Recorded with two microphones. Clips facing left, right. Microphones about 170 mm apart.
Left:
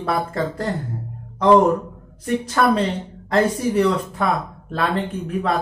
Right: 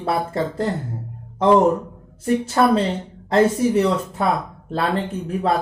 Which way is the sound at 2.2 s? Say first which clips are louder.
Right 1 dB; 25° right (ahead or behind).